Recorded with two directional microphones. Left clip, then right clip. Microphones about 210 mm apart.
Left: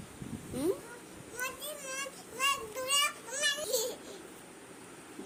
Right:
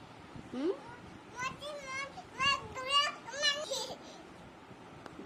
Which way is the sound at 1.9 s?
15° right (ahead or behind).